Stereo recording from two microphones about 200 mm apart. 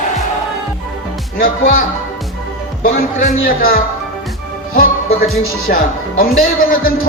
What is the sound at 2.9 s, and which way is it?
Speech, 45° left (ahead or behind).